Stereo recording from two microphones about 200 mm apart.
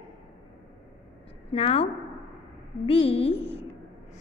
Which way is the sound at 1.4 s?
30° left (ahead or behind).